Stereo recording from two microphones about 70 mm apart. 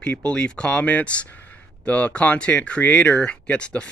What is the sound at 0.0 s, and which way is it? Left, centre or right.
Speech, centre.